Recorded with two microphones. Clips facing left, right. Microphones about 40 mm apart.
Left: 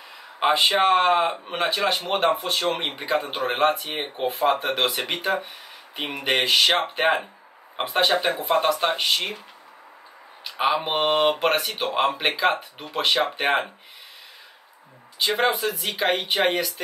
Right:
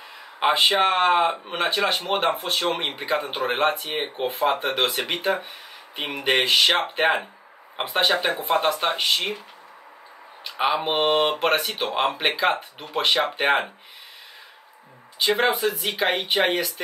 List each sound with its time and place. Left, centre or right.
0.4 s speech: centre
2.0 s speech: centre
6.2 s speech: centre
10.4 s speech: centre
15.1 s speech: centre